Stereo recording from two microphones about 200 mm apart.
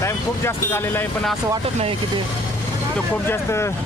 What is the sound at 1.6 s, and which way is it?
Speech, 30° right (ahead or behind).